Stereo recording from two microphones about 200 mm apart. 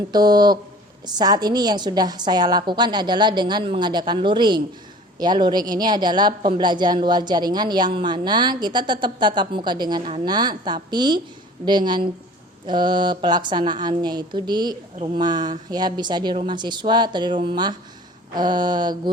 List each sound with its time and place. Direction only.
0.1 s speech: 20° right (ahead or behind)